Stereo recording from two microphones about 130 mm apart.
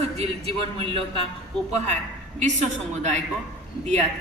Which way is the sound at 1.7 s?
60° right (ahead or behind).